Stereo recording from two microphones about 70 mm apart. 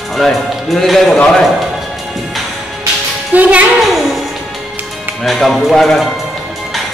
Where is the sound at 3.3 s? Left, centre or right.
Right.